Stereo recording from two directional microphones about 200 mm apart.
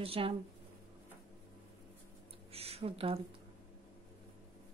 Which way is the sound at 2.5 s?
30° right (ahead or behind).